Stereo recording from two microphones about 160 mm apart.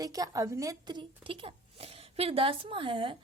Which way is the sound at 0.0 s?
20° right (ahead or behind).